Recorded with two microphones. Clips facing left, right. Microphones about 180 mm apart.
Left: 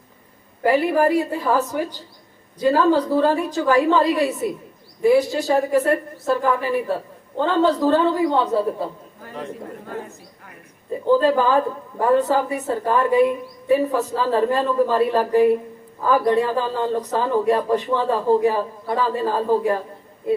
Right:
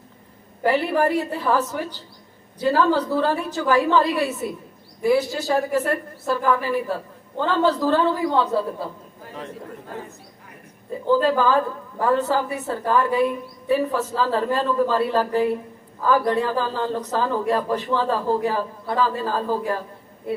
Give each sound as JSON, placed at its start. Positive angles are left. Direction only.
{"t": 0.6, "sound": "a woman's voice", "side_deg": 15}
{"t": 11.0, "sound": "a woman's voice", "side_deg": 15}